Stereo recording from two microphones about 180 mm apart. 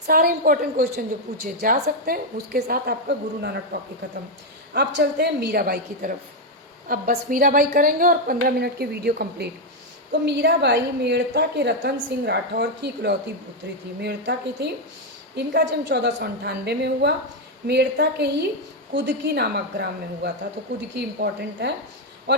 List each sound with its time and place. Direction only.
0.1 s a woman's voice: 55° right (ahead or behind); by 21.7 s 70° right (ahead or behind)